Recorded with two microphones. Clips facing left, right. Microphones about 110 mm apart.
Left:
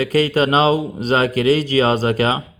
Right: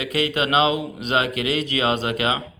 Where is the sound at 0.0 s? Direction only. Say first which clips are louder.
Left 7 dB; 40° left (ahead or behind).